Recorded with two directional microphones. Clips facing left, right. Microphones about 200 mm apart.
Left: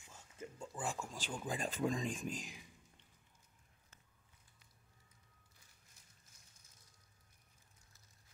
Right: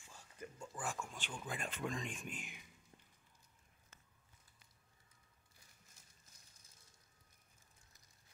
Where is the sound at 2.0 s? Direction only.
35° left (ahead or behind).